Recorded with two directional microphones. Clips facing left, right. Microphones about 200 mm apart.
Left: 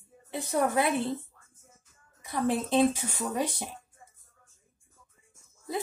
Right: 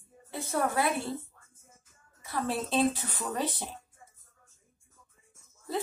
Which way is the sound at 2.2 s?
15° left (ahead or behind).